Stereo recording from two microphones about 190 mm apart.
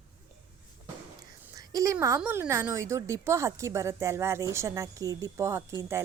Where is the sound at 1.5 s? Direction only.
15° right (ahead or behind).